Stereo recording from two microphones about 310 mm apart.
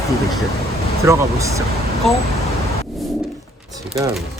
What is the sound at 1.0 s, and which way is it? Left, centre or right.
Speech, centre.